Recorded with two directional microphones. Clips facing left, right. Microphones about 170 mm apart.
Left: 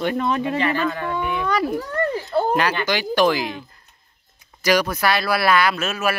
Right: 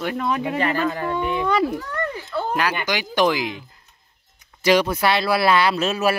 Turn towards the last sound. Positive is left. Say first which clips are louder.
# right 2 dB
turn(degrees=-30)  # may be behind; listen again after turning